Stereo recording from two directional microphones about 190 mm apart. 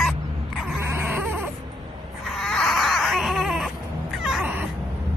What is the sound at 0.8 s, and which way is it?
Baby cry, 10° right (ahead or behind).